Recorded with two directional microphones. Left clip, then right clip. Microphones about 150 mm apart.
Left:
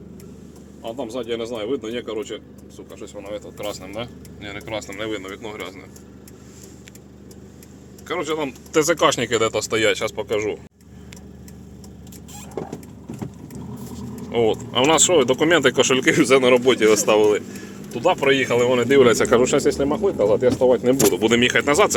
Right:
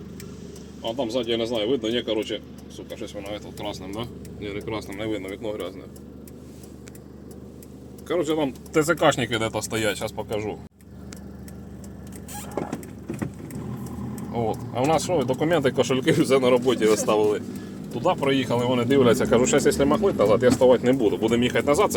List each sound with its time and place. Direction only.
0.9 s speech: 20° right (ahead or behind)
3.2 s speech: centre (ahead or behind)
4.9 s speech: 15° right (ahead or behind)
8.0 s speech: 25° right (ahead or behind)
8.7 s speech: 5° right (ahead or behind)
14.3 s speech: 5° left (ahead or behind)
16.0 s speech: 20° left (ahead or behind)
17.9 s speech: 5° left (ahead or behind)
19.1 s speech: 15° left (ahead or behind)
19.9 s speech: 5° right (ahead or behind)